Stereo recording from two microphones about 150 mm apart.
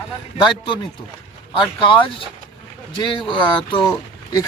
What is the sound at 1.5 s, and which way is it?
Speech, 35° left (ahead or behind).